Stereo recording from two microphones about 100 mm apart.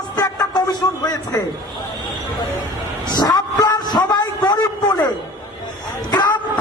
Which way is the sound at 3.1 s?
40° left (ahead or behind).